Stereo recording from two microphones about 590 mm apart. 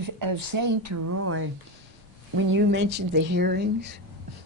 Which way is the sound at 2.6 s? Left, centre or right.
Centre.